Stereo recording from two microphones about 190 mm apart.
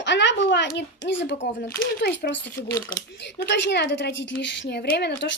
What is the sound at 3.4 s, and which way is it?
Speech, 65° left (ahead or behind).